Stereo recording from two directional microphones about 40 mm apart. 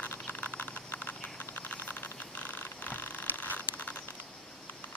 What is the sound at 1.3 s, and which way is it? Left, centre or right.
Vehicle, left.